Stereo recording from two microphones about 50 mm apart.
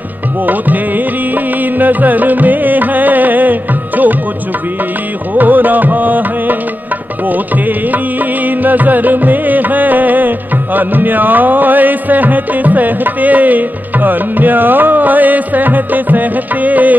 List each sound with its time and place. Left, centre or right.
0.5 s music: right
5.3 s music: right